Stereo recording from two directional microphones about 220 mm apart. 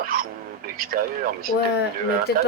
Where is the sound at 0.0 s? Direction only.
40° right (ahead or behind).